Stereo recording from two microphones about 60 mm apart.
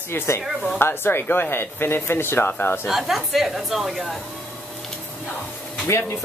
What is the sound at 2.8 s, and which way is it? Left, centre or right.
A woman's voice, centre.